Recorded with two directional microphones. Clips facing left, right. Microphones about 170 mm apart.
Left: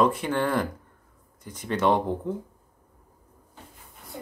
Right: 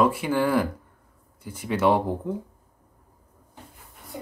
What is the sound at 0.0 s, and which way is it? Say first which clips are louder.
Speech: right 1 dB; 10° right (ahead or behind).